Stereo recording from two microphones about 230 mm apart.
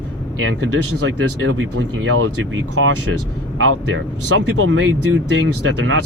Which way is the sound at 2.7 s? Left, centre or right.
Right.